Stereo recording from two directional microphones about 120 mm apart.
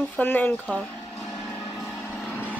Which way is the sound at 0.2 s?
15° left (ahead or behind).